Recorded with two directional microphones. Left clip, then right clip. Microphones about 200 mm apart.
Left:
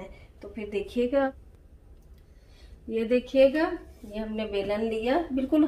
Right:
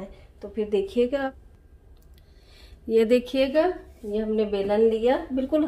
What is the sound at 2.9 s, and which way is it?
Speech, 60° right (ahead or behind).